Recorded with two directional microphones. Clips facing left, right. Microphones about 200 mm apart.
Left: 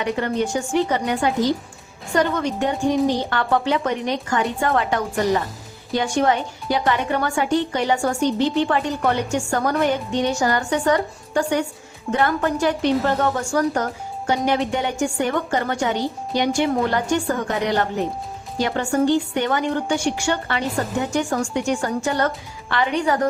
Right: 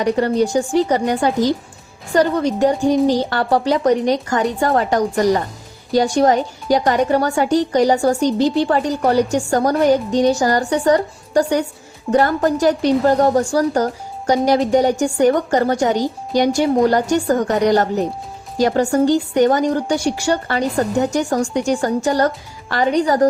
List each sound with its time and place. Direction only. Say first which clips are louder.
0.0 s a woman's voice: right 6 dB; 35° right (ahead or behind)